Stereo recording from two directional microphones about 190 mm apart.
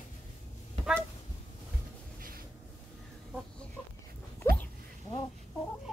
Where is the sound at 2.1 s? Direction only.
50° right (ahead or behind).